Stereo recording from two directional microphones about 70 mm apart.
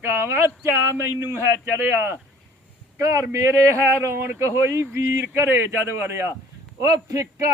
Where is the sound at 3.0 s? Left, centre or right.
Right.